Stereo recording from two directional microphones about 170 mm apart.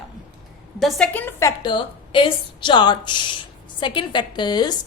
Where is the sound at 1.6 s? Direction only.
25° left (ahead or behind).